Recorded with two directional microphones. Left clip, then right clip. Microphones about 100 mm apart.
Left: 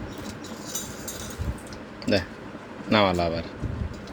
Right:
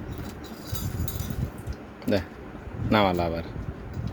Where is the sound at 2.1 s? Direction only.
40° right (ahead or behind).